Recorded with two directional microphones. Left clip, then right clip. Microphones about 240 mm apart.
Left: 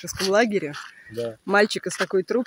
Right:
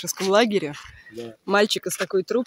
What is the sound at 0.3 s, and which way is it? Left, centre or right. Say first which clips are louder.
Speech: right 1 dB; centre.